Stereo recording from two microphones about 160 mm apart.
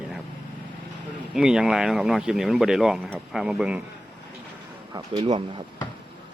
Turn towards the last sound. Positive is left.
turn(degrees=-35)  # may be behind; listen again after turning